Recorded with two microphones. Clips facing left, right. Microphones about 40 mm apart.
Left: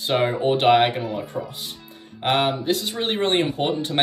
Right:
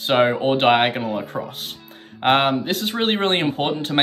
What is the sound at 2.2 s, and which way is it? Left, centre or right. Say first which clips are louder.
Speech: right 3 dB; right.